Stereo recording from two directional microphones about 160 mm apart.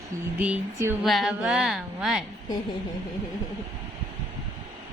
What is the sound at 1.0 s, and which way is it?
A woman's voice, centre (ahead or behind).